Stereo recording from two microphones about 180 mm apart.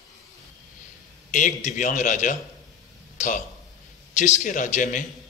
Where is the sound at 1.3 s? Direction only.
45° left (ahead or behind).